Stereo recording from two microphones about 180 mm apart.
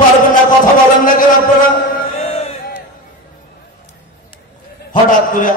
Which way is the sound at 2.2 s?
35° left (ahead or behind).